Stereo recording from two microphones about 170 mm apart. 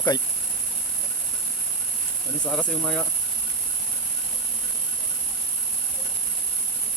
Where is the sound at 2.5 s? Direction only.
Centre (ahead or behind).